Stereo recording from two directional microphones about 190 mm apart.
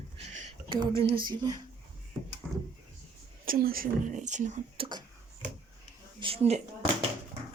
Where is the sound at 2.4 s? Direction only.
5° right (ahead or behind).